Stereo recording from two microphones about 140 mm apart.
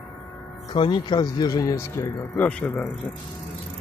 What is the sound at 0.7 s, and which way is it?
Speech, 35° left (ahead or behind).